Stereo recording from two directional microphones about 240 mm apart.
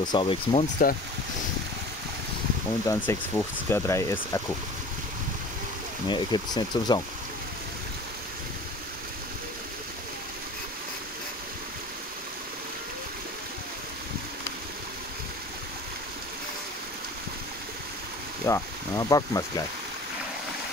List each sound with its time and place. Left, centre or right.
0.0 s speech: centre
2.9 s speech: centre
6.0 s speech: centre
18.4 s speech: centre